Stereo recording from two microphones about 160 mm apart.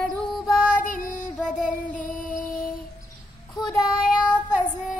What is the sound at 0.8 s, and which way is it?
Child singing, 55° left (ahead or behind).